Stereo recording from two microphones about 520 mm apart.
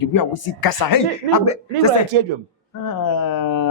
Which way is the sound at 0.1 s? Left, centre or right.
Left.